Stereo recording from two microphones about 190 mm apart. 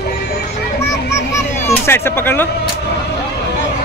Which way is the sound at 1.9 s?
10° left (ahead or behind).